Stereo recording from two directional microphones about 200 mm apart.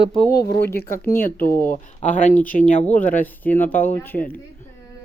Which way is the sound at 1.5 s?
10° left (ahead or behind).